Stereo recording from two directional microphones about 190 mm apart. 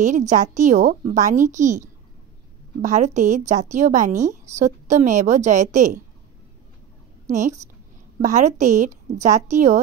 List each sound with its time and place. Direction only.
0.0 s a woman's voice: 40° right (ahead or behind)
7.2 s a woman's voice: 40° right (ahead or behind)